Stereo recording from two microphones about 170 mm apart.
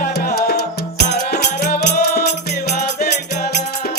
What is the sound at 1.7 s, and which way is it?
Music, 70° left (ahead or behind).